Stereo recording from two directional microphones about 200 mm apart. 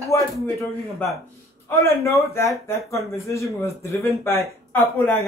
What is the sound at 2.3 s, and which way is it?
Speech, 15° left (ahead or behind).